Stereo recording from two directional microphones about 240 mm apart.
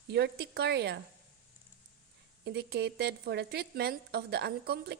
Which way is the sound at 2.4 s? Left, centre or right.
Right.